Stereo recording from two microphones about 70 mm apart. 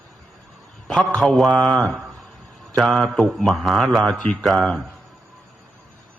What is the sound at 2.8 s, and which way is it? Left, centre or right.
Mantra, centre.